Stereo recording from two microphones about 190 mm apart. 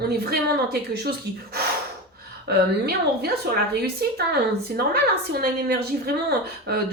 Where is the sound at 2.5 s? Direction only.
55° right (ahead or behind).